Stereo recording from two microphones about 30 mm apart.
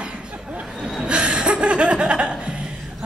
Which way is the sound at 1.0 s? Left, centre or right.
Right.